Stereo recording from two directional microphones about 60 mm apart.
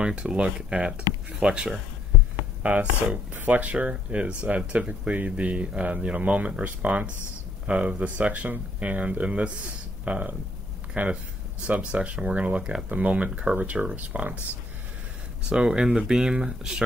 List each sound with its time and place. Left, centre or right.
0.0 s speech: centre
15.5 s speech: centre